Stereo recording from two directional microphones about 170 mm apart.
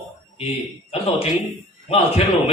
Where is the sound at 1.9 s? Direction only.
35° left (ahead or behind).